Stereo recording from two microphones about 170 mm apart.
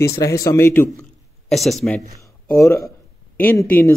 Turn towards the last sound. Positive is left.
turn(degrees=15)  # may be behind; listen again after turning